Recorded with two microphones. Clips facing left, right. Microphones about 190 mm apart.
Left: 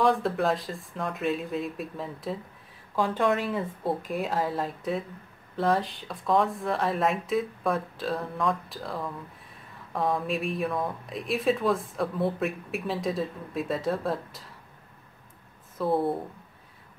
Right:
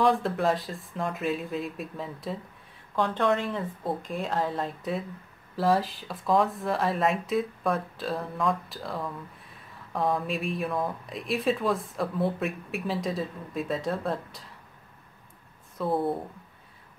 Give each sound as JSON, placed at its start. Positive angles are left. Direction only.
{"t": 0.0, "sound": "speech", "side_deg": 0}
{"t": 15.8, "sound": "speech", "side_deg": 0}